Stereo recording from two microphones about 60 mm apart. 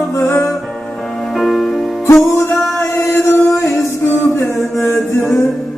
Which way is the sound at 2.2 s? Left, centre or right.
Left.